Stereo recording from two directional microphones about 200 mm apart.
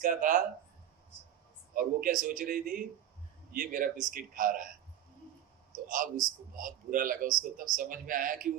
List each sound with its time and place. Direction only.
0.0 s speech: 45° right (ahead or behind)
1.7 s speech: 45° right (ahead or behind)
5.7 s speech: 40° right (ahead or behind)